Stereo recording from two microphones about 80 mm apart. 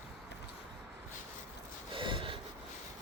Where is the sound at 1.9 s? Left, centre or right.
Right.